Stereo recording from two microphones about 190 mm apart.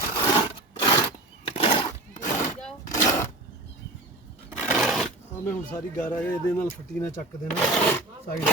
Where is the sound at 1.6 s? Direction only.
30° left (ahead or behind).